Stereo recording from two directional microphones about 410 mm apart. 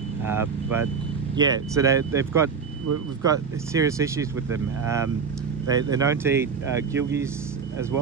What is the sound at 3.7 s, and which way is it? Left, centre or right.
Speech, centre.